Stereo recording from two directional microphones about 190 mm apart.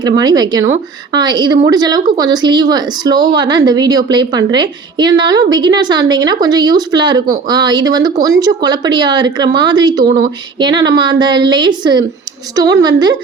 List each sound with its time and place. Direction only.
0.0 s speech: 20° right (ahead or behind)